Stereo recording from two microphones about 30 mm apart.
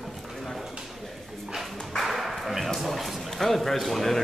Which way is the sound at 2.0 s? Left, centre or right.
Centre.